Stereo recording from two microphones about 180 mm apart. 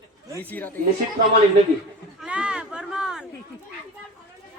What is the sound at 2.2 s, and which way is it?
Speech, 5° right (ahead or behind).